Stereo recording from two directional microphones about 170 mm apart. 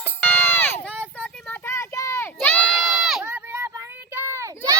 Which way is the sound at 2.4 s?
10° left (ahead or behind).